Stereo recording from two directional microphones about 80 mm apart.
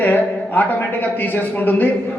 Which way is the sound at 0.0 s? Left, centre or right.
Left.